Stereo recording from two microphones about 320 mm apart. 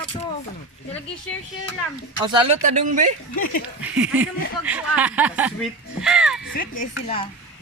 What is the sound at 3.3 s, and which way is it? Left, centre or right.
Speech, left.